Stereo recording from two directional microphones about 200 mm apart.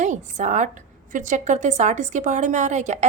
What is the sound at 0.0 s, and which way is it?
A woman's voice, 35° right (ahead or behind).